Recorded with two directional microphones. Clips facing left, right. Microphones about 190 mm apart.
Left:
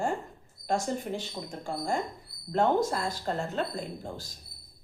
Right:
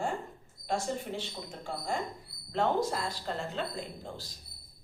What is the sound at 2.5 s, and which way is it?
Speech, 45° left (ahead or behind).